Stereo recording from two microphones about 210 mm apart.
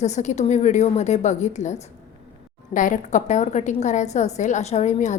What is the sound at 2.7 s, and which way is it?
A woman's voice, 40° left (ahead or behind).